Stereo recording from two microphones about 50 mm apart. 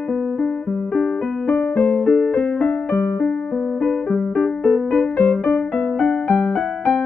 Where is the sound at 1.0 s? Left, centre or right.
Left.